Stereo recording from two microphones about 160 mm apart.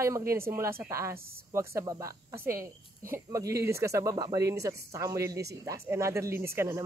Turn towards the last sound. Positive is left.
turn(degrees=-15)  # may be behind; listen again after turning